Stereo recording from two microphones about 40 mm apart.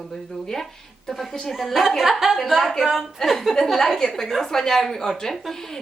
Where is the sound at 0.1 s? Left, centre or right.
Centre.